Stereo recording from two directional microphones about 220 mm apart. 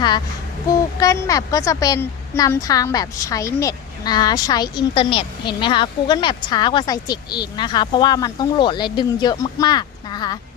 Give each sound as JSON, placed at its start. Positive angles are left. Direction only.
{"t": 0.7, "sound": "a woman's voice", "side_deg": 15}